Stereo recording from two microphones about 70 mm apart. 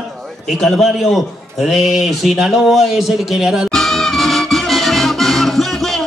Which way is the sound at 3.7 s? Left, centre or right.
Centre.